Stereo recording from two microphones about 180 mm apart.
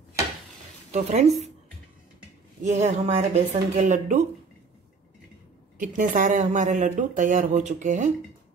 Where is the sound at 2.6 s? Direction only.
40° right (ahead or behind).